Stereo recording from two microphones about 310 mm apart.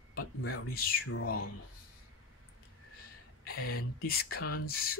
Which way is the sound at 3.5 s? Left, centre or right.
Left.